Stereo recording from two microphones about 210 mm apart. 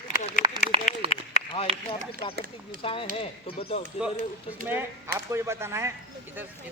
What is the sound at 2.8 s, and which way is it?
Speech, 25° left (ahead or behind).